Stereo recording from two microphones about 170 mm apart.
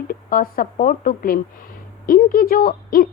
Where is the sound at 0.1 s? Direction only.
55° left (ahead or behind).